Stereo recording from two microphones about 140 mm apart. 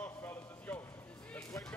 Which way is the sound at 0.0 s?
15° left (ahead or behind).